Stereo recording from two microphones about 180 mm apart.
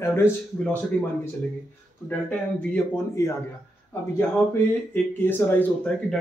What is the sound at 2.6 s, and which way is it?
Speech, 10° left (ahead or behind).